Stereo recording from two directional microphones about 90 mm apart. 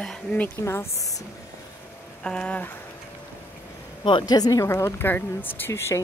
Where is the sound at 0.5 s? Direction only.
30° left (ahead or behind).